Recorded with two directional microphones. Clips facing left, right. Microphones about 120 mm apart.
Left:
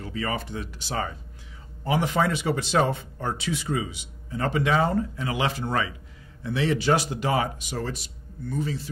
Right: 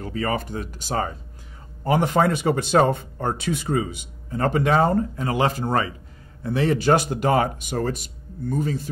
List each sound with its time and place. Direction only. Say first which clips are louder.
0.0 s speech: right 4 dB; 45° right (ahead or behind)